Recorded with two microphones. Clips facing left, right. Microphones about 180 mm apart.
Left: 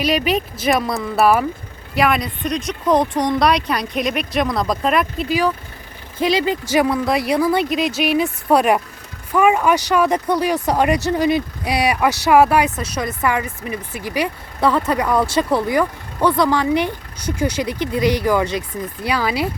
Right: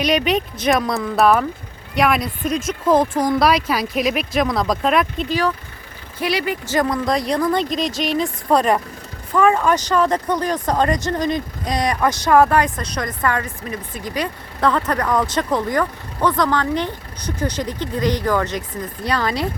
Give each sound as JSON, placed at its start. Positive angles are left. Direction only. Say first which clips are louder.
{"t": 0.0, "sound": "speech", "louder": "even", "side_deg": 0}
{"t": 6.4, "sound": "speech", "louder": "left 3 dB", "side_deg": 20}
{"t": 6.7, "sound": "speech", "louder": "left 2 dB", "side_deg": 5}